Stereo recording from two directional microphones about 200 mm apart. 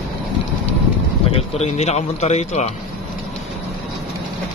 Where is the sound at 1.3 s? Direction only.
35° left (ahead or behind).